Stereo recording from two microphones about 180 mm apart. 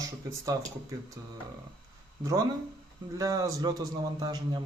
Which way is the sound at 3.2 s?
20° right (ahead or behind).